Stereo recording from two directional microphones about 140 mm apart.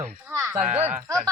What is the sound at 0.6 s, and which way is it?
Speech, 55° right (ahead or behind).